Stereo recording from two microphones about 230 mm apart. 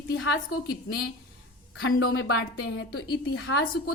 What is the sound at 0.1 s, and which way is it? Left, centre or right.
A woman's voice, left.